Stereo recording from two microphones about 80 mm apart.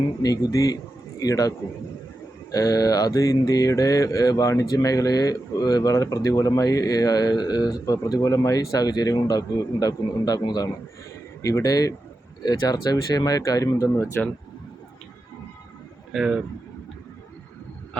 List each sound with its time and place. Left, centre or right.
0.2 s mantra: left
11.4 s mantra: left
14.2 s speech: left
16.1 s speech: centre